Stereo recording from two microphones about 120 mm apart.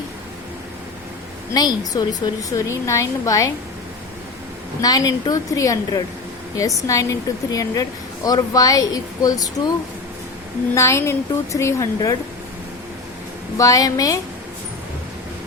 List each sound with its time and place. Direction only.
1.9 s a woman's voice: 35° left (ahead or behind)
4.8 s a woman's voice: 30° left (ahead or behind)
10.8 s a woman's voice: 25° left (ahead or behind)
13.6 s a woman's voice: 30° left (ahead or behind)